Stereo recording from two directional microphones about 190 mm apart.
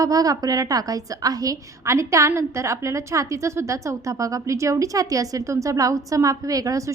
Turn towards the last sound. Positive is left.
turn(degrees=-15)  # may be behind; listen again after turning